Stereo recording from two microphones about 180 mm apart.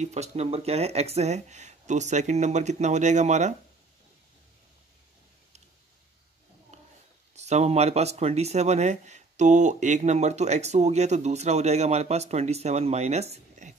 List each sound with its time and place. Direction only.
0.0 s speech: 40° right (ahead or behind)
6.7 s a sound: 40° right (ahead or behind)
7.3 s speech: 40° right (ahead or behind)